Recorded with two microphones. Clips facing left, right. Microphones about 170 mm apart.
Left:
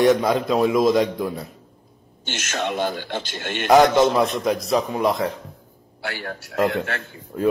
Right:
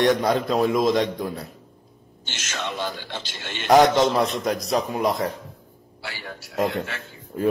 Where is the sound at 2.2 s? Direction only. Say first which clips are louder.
Left 5 dB; 55° left (ahead or behind).